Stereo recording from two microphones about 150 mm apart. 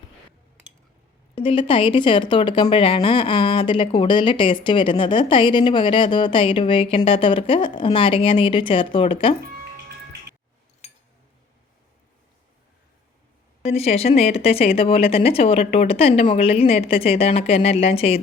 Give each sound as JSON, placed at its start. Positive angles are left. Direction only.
{"t": 1.4, "sound": "a woman's voice", "side_deg": 35}
{"t": 10.8, "sound": "cutlery", "side_deg": 45}
{"t": 13.7, "sound": "a woman's voice", "side_deg": 45}